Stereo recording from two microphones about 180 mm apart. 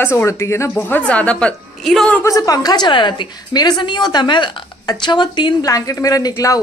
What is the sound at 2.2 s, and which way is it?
Speech, 20° left (ahead or behind).